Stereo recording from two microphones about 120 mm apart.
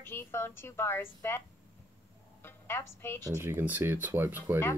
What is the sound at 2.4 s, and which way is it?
Speech, 20° left (ahead or behind).